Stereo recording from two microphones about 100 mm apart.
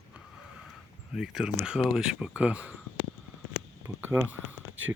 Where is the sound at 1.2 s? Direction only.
5° right (ahead or behind).